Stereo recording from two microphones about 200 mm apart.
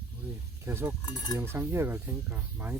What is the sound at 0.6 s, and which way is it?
Speech, 10° right (ahead or behind).